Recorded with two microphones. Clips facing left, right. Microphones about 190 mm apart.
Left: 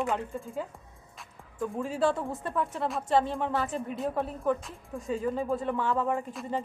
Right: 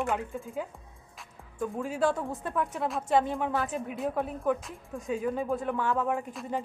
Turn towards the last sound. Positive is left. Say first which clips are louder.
# left 1 dB
turn(degrees=0)  # may be behind; listen again after turning